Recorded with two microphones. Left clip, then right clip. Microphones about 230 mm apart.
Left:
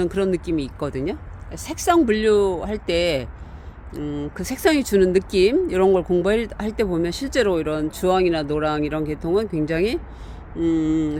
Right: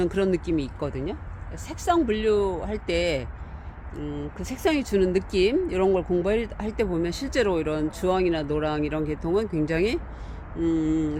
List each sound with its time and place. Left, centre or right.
0.0 s speech: centre; by 1.1 s left
1.5 s speech: left
3.9 s speech: left; by 11.2 s centre